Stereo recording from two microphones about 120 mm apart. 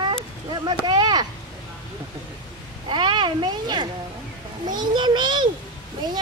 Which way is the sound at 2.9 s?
40° right (ahead or behind).